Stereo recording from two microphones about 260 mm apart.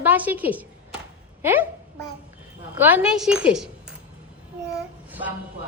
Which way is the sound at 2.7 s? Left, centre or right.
Centre.